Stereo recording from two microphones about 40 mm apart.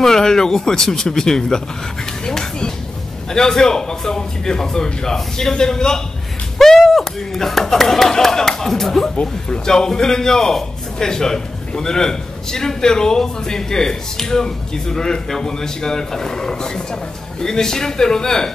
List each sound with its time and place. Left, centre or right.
0.0 s a man's voice: centre
9.1 s speech: left
9.7 s a man's voice: centre